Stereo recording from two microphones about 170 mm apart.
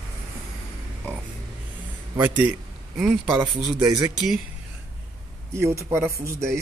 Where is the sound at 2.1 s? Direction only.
10° right (ahead or behind).